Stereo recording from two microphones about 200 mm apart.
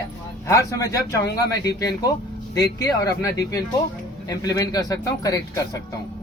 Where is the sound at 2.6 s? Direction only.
20° left (ahead or behind).